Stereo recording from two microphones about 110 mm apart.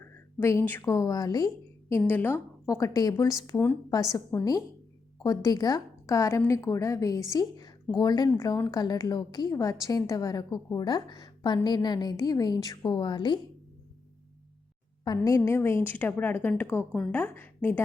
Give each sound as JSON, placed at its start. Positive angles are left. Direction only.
{"t": 0.0, "sound": "a sound", "side_deg": 25}
{"t": 0.9, "sound": "a woman's voice", "side_deg": 35}
{"t": 1.9, "sound": "a woman's voice", "side_deg": 20}
{"t": 2.6, "sound": "a woman's voice", "side_deg": 30}
{"t": 8.3, "sound": "a woman's voice", "side_deg": 25}
{"t": 15.0, "sound": "a woman's voice", "side_deg": 35}